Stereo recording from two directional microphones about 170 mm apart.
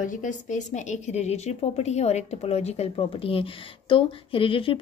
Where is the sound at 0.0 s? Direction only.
50° left (ahead or behind).